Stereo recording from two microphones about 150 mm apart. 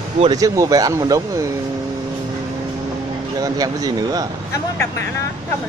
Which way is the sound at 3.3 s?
25° right (ahead or behind).